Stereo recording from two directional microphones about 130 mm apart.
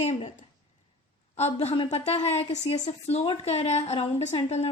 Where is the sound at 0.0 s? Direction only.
55° left (ahead or behind).